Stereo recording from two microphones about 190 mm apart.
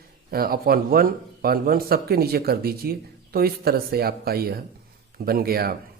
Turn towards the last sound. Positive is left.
turn(degrees=-55)  # may be behind; listen again after turning